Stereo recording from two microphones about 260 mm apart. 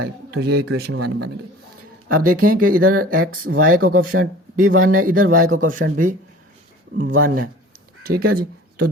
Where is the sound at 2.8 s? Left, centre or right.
Right.